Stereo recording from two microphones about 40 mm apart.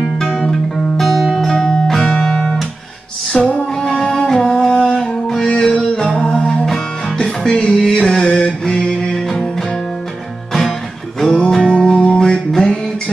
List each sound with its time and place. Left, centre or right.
1.0 s music: centre
1.3 s music: centre
7.6 s music: centre
8.0 s mantra: centre
9.0 s music: centre
11.3 s music: centre
11.9 s music: left
12.2 s music: centre